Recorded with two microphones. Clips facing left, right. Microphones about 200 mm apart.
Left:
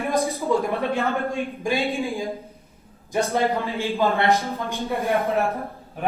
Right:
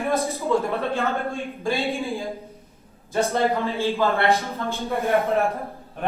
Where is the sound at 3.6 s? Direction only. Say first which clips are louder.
Right 1 dB; 15° left (ahead or behind).